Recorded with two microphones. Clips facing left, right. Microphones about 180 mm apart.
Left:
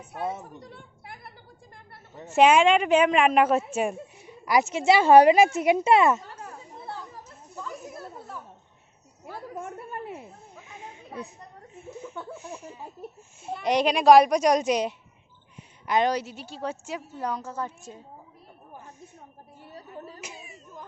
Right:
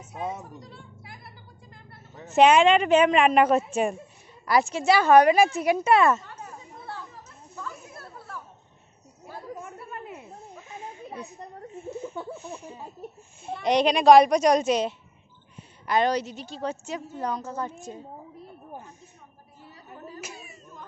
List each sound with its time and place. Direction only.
0.6 s music: 55° left (ahead or behind)
2.3 s a woman's voice: 5° left (ahead or behind)
6.7 s children playing: 25° left (ahead or behind)
7.5 s chatter: 15° left (ahead or behind)
10.7 s a sound: 15° left (ahead or behind)
12.3 s a woman's voice: 10° left (ahead or behind)
20.2 s clapping: 20° left (ahead or behind)